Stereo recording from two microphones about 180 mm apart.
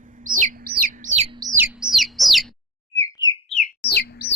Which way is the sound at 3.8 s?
60° left (ahead or behind).